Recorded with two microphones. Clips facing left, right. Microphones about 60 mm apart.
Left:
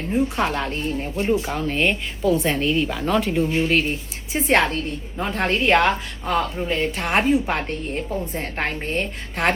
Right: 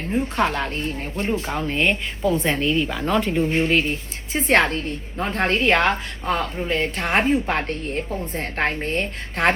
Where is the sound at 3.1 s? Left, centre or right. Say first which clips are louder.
Even; centre.